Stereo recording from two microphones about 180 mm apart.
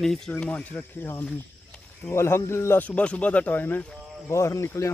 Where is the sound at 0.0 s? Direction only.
Centre (ahead or behind).